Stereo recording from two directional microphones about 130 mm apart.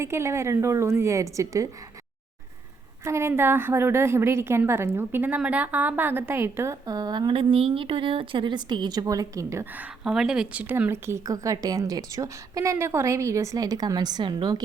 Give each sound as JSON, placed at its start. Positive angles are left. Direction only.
{"t": 0.0, "sound": "a woman's voice", "side_deg": -20}
{"t": 3.0, "sound": "a woman's voice", "side_deg": -20}
{"t": 10.0, "sound": "a woman's voice", "side_deg": -5}